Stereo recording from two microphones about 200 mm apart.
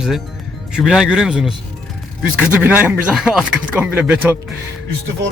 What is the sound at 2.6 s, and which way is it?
Speech, 10° right (ahead or behind).